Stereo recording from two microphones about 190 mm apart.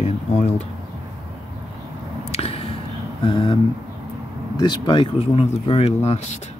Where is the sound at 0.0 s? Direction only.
35° left (ahead or behind).